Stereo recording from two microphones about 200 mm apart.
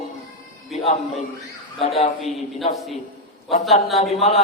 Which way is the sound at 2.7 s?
Centre (ahead or behind).